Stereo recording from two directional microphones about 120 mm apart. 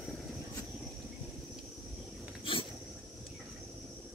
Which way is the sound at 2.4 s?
45° left (ahead or behind).